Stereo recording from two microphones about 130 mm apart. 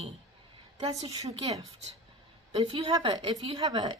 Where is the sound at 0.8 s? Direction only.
30° right (ahead or behind).